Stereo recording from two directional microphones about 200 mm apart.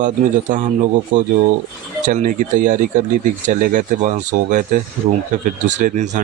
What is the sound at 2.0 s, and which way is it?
Speech, 40° right (ahead or behind).